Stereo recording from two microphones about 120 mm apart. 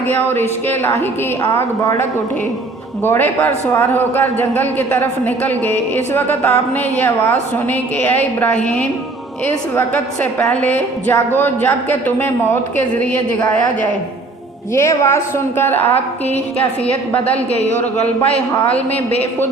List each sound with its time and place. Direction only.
0.1 s a man's voice: 15° left (ahead or behind)
14.7 s a woman's voice: 25° left (ahead or behind)
15.8 s a woman's voice: 55° left (ahead or behind)
16.8 s a man's voice: 10° left (ahead or behind)